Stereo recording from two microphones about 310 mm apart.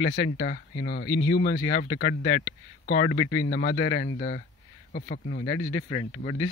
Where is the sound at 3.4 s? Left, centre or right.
Left.